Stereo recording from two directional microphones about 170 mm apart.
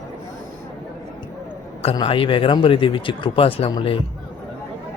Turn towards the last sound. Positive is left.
turn(degrees=30)  # may be behind; listen again after turning